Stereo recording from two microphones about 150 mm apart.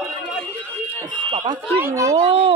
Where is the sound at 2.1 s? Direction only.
35° right (ahead or behind).